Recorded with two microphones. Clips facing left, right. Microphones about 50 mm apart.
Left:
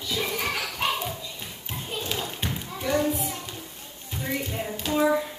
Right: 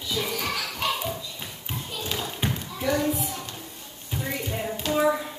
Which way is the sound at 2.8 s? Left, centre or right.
Centre.